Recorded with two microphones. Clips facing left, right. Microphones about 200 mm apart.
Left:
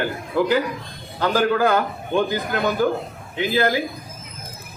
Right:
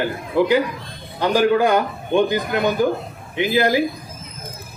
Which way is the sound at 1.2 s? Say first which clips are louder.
Right 3 dB; 15° right (ahead or behind).